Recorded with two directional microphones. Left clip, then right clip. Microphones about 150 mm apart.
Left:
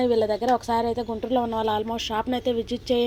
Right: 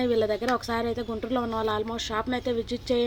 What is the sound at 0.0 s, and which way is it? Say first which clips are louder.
Speech: left 3 dB; 5° left (ahead or behind).